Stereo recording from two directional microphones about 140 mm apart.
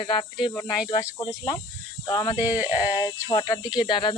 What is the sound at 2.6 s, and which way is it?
Speech, 15° right (ahead or behind).